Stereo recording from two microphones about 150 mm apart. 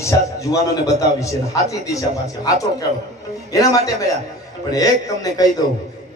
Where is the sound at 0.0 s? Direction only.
20° left (ahead or behind).